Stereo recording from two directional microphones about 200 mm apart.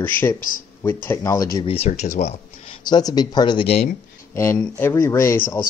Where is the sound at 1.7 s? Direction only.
30° left (ahead or behind).